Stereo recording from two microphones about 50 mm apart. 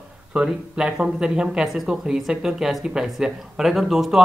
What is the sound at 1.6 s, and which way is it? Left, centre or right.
Speech, centre.